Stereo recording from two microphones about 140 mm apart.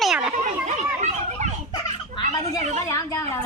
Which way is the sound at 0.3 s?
55° right (ahead or behind).